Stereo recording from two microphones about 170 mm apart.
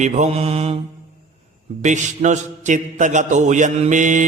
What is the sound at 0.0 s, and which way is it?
Mantra, 45° right (ahead or behind).